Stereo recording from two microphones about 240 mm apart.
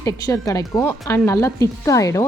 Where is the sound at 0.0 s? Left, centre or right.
Centre.